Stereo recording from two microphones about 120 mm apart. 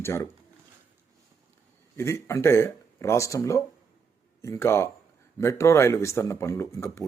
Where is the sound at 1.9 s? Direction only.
25° left (ahead or behind).